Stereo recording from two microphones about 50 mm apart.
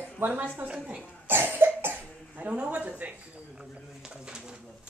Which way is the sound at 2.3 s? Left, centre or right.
Right.